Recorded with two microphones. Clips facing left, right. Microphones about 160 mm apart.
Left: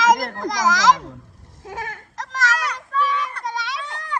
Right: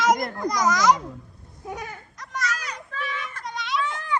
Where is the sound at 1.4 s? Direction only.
90° left.